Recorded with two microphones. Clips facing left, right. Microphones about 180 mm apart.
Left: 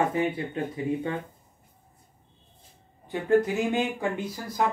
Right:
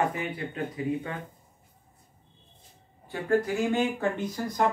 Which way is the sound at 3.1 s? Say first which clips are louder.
Left 3 dB; 20° left (ahead or behind).